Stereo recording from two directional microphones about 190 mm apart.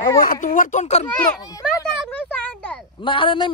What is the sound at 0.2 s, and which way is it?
Speech, 45° left (ahead or behind).